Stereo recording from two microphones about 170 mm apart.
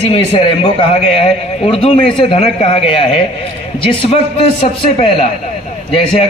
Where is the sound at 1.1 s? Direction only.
35° left (ahead or behind).